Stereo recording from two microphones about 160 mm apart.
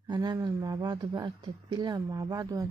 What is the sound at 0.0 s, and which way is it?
Speech, 25° right (ahead or behind).